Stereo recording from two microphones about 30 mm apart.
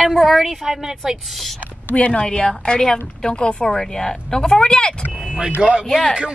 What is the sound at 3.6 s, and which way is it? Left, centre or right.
Speech, centre.